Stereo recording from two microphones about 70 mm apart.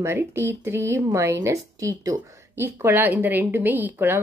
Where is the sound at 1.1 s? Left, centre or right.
Right.